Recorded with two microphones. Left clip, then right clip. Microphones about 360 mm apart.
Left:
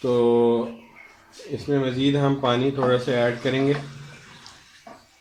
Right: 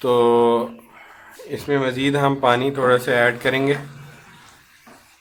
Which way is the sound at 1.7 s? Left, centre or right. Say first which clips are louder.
Right 3 dB; right.